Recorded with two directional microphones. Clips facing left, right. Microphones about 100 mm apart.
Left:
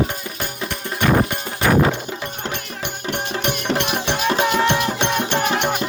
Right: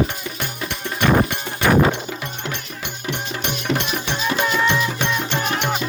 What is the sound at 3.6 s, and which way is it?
Music, 55° left (ahead or behind).